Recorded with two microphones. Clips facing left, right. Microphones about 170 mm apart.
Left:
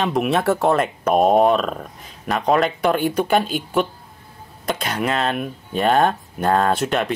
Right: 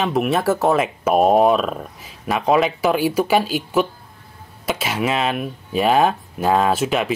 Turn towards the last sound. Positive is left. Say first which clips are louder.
# right 1 dB
turn(degrees=0)  # may be behind; listen again after turning